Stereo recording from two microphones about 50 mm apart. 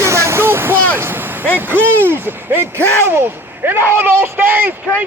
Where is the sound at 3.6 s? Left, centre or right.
Right.